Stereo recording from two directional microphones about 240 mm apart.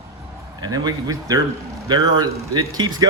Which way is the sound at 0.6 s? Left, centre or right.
Centre.